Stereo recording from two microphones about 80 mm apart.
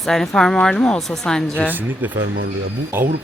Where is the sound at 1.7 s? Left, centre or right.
Right.